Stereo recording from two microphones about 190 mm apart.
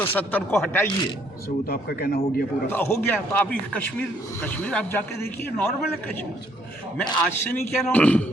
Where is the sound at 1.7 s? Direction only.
55° left (ahead or behind).